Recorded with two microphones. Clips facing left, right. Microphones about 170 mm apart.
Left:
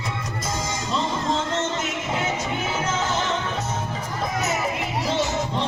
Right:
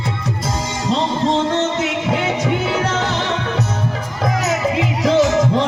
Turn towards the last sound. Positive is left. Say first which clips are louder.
# right 10 dB
turn(degrees=-90)